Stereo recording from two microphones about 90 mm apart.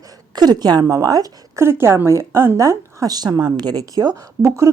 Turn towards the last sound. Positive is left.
turn(degrees=-35)  # may be behind; listen again after turning